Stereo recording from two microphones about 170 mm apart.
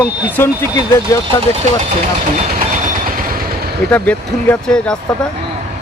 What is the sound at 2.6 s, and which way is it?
Vehicle, 50° right (ahead or behind).